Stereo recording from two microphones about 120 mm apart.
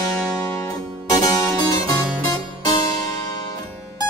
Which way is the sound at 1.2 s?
30° left (ahead or behind).